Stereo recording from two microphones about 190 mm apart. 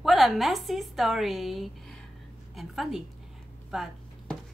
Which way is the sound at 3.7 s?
Centre (ahead or behind).